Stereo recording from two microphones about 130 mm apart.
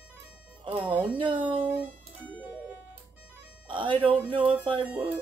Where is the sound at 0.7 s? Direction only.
40° right (ahead or behind).